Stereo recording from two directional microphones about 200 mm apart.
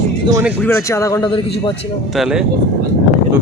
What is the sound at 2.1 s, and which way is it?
Speech, centre (ahead or behind).